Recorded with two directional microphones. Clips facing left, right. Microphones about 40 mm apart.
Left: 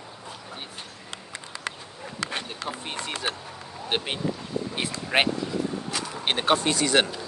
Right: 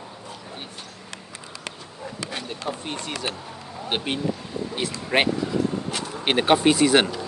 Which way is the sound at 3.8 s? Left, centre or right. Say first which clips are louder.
Right 2 dB; centre.